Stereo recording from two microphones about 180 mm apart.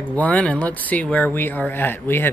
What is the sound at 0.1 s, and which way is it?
Speech, 5° left (ahead or behind).